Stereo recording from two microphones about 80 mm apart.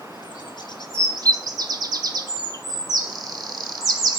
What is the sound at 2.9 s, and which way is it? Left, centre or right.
Bird, right.